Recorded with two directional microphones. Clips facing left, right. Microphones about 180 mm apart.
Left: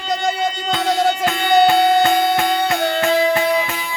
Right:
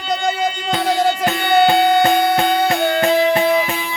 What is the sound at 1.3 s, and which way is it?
Music, 25° right (ahead or behind).